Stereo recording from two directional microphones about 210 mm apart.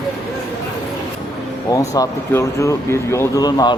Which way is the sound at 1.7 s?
15° left (ahead or behind).